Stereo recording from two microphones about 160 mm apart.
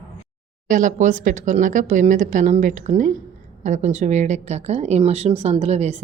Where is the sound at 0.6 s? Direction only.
55° right (ahead or behind).